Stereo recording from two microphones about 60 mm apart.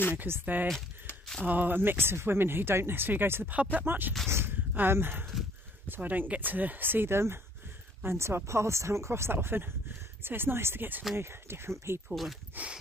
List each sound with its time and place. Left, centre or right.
0.1 s speech: right
4.3 s a sound: right
5.9 s speech: right
12.6 s speech: right